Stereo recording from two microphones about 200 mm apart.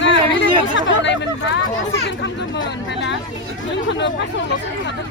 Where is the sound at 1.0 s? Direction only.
65° left (ahead or behind).